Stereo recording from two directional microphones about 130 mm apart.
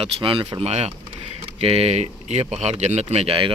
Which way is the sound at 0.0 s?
40° right (ahead or behind).